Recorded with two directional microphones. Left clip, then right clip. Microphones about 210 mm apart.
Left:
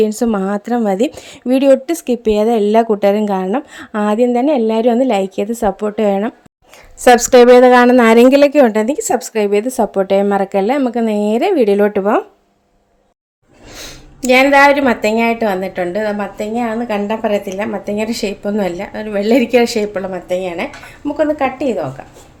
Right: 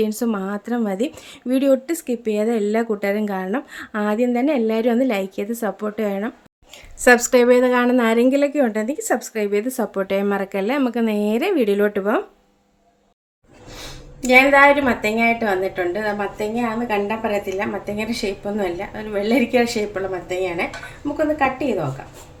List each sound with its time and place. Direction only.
0.0 s a woman's voice: 30° left (ahead or behind)
13.7 s a woman's voice: 50° left (ahead or behind)